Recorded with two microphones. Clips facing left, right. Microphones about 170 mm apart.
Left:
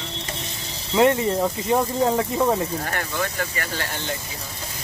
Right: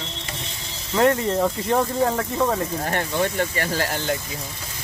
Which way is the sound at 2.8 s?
25° right (ahead or behind).